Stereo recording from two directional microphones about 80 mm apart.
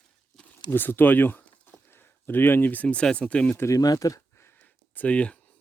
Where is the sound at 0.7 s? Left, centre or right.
Left.